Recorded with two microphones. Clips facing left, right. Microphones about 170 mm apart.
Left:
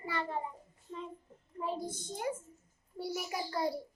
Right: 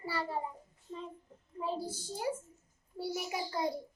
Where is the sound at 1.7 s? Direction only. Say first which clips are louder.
Right 1 dB; 30° right (ahead or behind).